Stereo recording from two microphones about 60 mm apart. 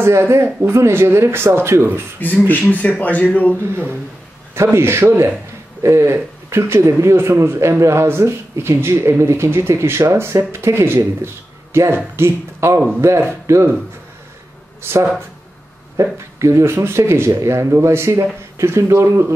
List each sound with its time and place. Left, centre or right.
0.0 s a man's voice: right
2.1 s speech: left
4.7 s a man's voice: right
14.8 s speech: right
16.0 s a man's voice: right